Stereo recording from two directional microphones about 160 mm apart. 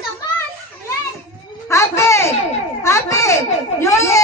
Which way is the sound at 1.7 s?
20° left (ahead or behind).